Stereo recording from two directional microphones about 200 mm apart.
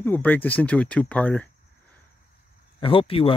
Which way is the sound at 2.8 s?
25° left (ahead or behind).